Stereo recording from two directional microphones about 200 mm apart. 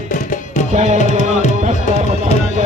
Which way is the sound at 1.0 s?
35° right (ahead or behind).